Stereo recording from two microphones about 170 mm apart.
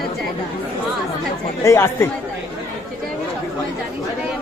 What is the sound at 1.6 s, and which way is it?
Speech, 15° left (ahead or behind).